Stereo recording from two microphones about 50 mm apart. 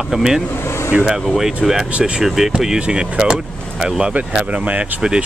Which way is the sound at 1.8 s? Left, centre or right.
Right.